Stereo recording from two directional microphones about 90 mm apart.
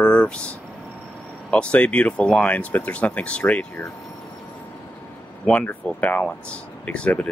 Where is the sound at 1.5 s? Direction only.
15° left (ahead or behind).